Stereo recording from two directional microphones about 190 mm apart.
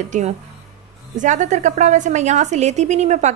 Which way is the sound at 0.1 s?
40° right (ahead or behind).